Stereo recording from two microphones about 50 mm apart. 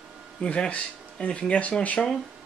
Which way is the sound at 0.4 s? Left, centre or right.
Left.